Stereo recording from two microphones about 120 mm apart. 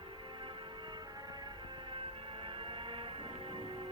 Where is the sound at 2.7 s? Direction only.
45° right (ahead or behind).